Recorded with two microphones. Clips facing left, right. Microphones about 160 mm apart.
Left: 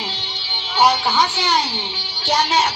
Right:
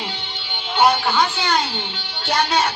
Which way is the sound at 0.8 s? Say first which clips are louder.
Even; 55° right (ahead or behind).